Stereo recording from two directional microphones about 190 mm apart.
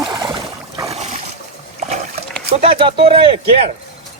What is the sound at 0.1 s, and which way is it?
Boat, 20° right (ahead or behind).